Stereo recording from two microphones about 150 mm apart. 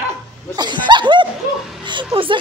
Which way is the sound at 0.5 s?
30° right (ahead or behind).